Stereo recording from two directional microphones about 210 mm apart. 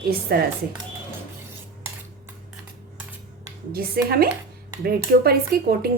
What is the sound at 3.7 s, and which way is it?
A woman's voice, 45° right (ahead or behind).